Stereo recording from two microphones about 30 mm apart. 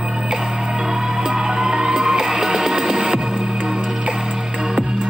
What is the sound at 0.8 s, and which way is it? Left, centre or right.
Music, right.